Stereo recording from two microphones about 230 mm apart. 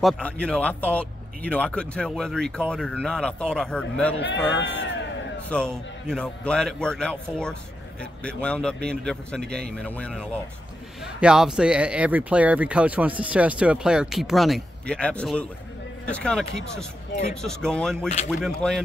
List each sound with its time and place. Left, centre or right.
0.0 s speech: centre
4.6 s a sound: left
6.0 s speech: centre